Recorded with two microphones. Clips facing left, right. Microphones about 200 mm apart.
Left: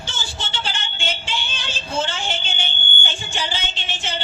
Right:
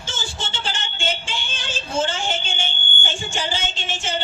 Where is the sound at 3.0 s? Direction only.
45° right (ahead or behind).